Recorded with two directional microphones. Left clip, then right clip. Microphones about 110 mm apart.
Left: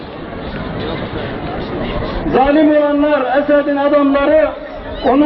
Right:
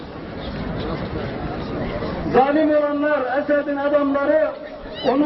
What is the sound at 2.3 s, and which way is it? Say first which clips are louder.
A man's voice: left 5 dB; 25° left (ahead or behind).